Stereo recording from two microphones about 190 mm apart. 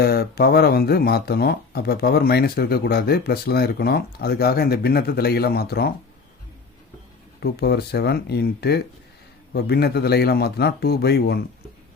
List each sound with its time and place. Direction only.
0.0 s speech: 55° left (ahead or behind)
7.3 s speech: 60° left (ahead or behind)